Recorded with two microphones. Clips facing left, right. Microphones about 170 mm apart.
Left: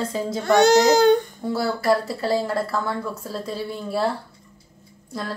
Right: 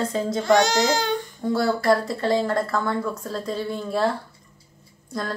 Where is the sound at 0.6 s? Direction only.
55° left (ahead or behind).